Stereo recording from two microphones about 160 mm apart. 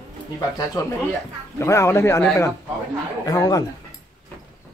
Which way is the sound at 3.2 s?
20° left (ahead or behind).